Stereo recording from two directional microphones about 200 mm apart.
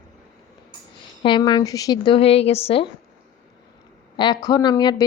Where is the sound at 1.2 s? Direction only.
25° left (ahead or behind).